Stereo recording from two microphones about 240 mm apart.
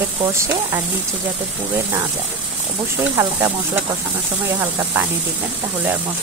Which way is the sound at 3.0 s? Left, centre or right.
Centre.